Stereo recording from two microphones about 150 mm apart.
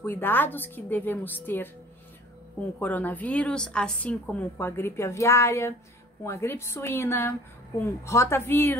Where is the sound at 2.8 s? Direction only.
10° left (ahead or behind).